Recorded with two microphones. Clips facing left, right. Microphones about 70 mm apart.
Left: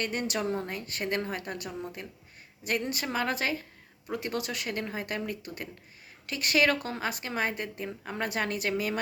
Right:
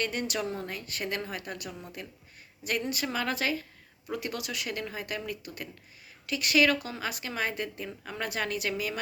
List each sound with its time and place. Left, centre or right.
0.0 s a woman's voice: left